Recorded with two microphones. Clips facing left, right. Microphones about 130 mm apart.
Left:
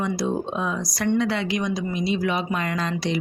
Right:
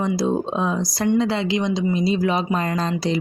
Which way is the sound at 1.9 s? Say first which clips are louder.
Right 2 dB; 35° right (ahead or behind).